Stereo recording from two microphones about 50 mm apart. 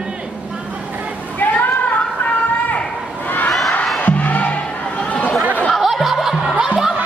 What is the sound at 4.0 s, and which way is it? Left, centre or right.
Music, left.